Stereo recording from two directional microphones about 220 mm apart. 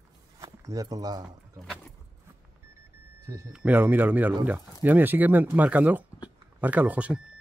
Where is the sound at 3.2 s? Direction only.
15° right (ahead or behind).